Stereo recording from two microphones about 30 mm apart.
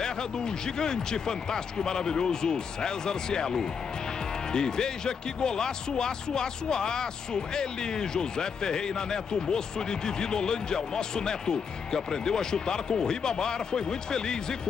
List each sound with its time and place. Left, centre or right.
0.0 s speech: left